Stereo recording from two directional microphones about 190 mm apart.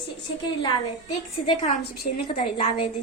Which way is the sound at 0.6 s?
25° left (ahead or behind).